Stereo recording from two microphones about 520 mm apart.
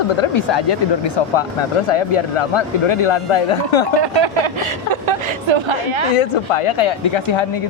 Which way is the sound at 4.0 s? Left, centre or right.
Right.